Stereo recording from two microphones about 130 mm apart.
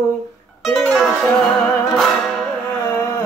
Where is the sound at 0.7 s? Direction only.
5° left (ahead or behind).